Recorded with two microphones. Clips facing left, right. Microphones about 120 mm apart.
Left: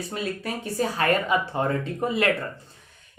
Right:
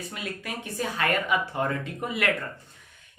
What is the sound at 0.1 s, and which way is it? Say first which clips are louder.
Speech: left 5 dB; 35° left (ahead or behind).